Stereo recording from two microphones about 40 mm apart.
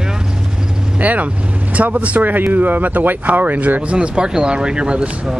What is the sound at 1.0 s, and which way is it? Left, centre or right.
Speech, right.